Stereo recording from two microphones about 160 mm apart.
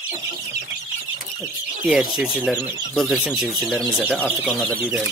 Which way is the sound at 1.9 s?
Centre (ahead or behind).